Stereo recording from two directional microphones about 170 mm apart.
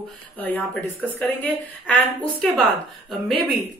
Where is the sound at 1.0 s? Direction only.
10° left (ahead or behind).